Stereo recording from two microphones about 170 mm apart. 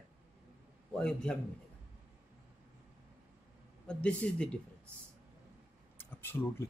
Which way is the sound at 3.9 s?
5° left (ahead or behind).